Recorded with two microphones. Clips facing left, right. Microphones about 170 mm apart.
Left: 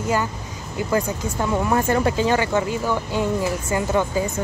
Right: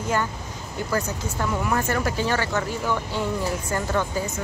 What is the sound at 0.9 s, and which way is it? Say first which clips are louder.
Speech: left 5 dB; 20° left (ahead or behind).